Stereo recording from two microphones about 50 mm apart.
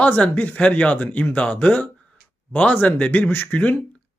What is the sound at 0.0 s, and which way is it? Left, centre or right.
Speech, left.